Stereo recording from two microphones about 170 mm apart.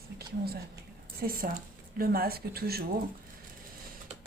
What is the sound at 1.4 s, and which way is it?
Speech, 50° right (ahead or behind).